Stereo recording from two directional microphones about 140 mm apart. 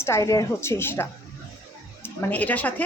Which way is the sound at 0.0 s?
20° left (ahead or behind).